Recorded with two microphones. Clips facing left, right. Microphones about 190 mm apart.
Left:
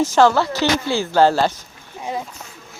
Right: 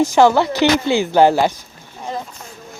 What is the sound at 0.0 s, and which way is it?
Speech, 15° right (ahead or behind).